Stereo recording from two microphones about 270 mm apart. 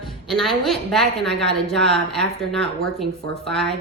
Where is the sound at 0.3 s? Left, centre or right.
Centre.